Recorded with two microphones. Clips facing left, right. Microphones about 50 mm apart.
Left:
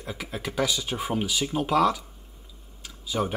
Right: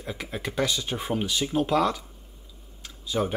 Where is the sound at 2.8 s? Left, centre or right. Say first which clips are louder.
Right 1 dB; centre.